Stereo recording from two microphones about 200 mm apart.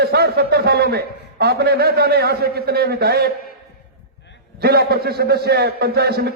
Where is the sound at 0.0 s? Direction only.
55° right (ahead or behind).